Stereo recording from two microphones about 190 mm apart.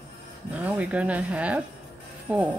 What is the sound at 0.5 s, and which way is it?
Speech, 5° right (ahead or behind).